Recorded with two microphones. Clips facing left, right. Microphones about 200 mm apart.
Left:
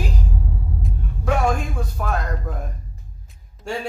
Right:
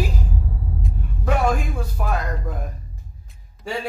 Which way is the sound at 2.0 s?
5° right (ahead or behind).